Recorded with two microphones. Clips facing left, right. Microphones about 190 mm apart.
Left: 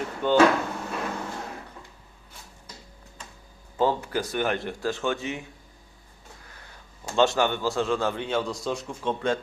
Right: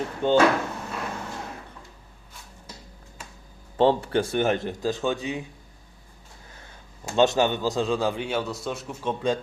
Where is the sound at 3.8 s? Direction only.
30° right (ahead or behind).